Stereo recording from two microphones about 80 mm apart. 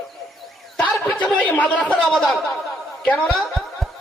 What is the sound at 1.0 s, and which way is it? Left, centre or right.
Speech, centre.